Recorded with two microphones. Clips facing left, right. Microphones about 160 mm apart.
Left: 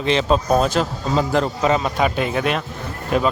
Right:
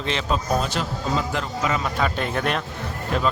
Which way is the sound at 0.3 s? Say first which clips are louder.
Left 5 dB; 40° left (ahead or behind).